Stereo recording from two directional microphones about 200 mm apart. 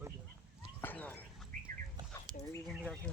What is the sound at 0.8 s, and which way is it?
Dog, 10° left (ahead or behind).